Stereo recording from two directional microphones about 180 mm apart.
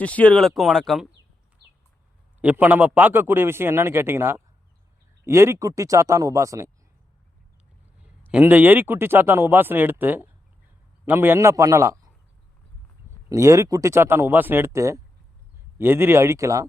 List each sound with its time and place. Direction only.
0.0 s speech: 10° left (ahead or behind)
2.4 s a man's voice: 10° right (ahead or behind)
8.0 s a man's voice: 5° right (ahead or behind)
13.3 s a man's voice: 15° right (ahead or behind)